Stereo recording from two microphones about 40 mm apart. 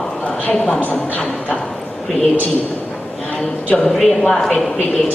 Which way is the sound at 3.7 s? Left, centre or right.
Left.